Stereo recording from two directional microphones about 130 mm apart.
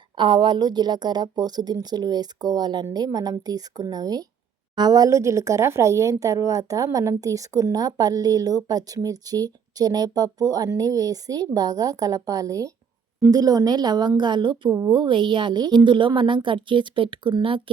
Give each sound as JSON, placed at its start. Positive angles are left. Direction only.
{"t": 0.2, "sound": "a woman's voice", "side_deg": -35}